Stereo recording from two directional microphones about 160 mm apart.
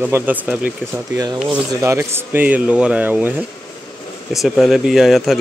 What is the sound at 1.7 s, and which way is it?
Speech, 20° right (ahead or behind).